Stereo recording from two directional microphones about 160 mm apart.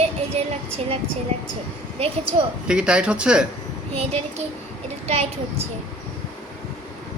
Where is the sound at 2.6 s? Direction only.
5° right (ahead or behind).